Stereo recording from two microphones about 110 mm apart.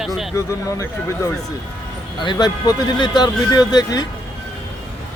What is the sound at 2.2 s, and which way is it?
Speech, 40° left (ahead or behind).